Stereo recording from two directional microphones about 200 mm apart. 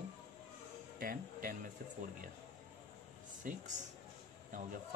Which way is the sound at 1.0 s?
45° right (ahead or behind).